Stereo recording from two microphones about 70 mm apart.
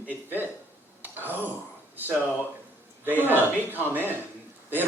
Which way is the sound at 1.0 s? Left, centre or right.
Right.